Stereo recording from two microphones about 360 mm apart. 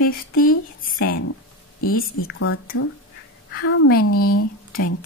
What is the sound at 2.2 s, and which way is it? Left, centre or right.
Speech, left.